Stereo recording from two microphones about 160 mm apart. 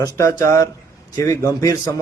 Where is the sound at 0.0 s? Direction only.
20° left (ahead or behind).